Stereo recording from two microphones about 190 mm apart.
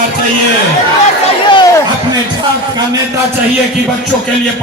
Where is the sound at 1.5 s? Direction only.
25° left (ahead or behind).